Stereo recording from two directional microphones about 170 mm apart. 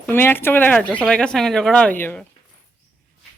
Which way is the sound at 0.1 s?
10° left (ahead or behind).